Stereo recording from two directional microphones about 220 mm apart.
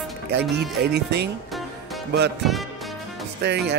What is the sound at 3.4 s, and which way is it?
Speech, 50° right (ahead or behind).